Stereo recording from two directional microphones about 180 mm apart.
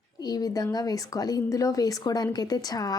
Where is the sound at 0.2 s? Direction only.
20° left (ahead or behind).